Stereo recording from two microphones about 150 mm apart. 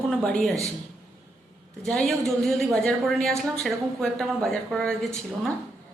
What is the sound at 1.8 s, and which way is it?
Speech, centre (ahead or behind).